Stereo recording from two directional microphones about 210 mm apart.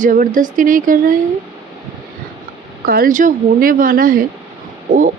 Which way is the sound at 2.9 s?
40° right (ahead or behind).